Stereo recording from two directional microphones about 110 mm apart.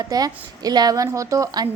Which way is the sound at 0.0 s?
35° right (ahead or behind).